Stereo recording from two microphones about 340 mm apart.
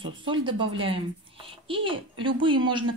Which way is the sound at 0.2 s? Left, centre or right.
Centre.